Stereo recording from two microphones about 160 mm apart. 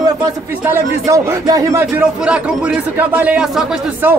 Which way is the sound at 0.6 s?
15° right (ahead or behind).